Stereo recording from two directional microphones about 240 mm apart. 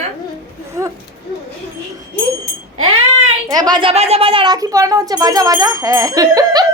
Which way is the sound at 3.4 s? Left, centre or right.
Centre.